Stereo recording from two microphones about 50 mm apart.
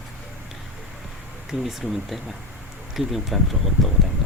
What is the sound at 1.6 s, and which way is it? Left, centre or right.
Speech, centre.